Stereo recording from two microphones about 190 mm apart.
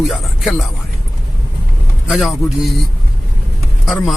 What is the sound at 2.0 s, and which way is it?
Speech, centre (ahead or behind).